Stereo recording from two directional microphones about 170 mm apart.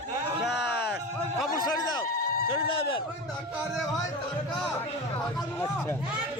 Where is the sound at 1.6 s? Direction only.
25° left (ahead or behind).